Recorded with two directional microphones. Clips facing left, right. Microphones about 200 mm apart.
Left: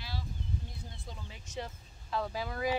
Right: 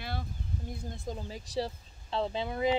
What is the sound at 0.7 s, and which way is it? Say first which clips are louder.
Speech: right 9 dB; 45° right (ahead or behind).